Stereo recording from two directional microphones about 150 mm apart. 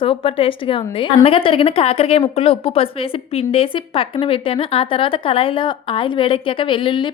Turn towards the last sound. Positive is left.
turn(degrees=35)  # may be behind; listen again after turning